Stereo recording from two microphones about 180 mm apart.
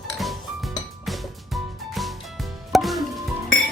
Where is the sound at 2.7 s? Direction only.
Centre (ahead or behind).